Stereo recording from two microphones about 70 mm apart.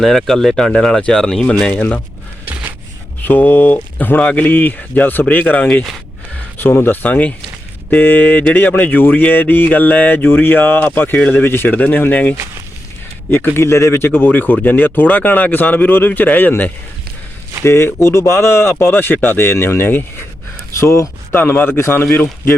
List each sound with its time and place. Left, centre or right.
0.0 s speech: centre
3.2 s speech: left
6.6 s speech: left
13.3 s speech: left
20.7 s speech: left
21.3 s speech: left